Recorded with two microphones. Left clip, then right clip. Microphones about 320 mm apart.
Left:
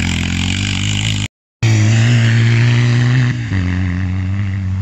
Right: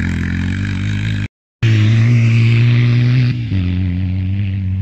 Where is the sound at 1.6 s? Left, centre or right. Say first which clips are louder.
Left 2 dB; centre.